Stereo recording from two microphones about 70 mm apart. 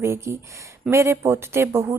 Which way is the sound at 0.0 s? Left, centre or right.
Right.